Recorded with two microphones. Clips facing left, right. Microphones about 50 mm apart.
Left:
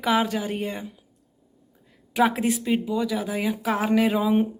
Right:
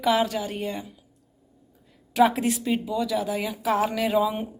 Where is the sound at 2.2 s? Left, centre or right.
Left.